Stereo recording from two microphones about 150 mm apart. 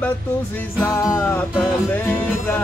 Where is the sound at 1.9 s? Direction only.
10° left (ahead or behind).